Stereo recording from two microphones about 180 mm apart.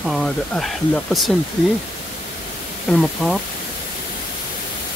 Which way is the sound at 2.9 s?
5° left (ahead or behind).